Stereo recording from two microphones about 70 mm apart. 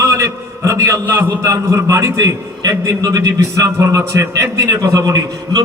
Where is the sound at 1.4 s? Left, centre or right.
Right.